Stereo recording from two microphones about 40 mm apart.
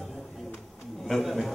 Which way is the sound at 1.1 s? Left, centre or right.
Centre.